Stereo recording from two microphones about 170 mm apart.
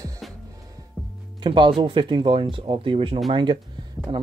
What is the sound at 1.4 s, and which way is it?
Speech, 30° right (ahead or behind).